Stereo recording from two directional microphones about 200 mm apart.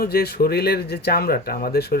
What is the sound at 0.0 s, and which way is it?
Speech, 50° left (ahead or behind).